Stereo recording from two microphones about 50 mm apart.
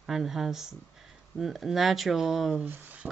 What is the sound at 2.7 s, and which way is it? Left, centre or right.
Speech, right.